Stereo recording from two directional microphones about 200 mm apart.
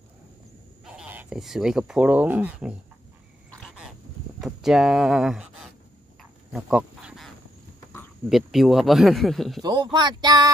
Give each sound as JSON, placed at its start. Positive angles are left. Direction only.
{"t": 0.8, "sound": "speech", "side_deg": -5}
{"t": 3.5, "sound": "a sound", "side_deg": 0}
{"t": 4.4, "sound": "speech", "side_deg": 0}
{"t": 6.5, "sound": "dog", "side_deg": -5}
{"t": 8.3, "sound": "speech", "side_deg": 0}
{"t": 9.6, "sound": "speech", "side_deg": -20}